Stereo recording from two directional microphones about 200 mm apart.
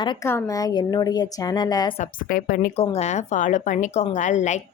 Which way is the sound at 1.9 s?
40° left (ahead or behind).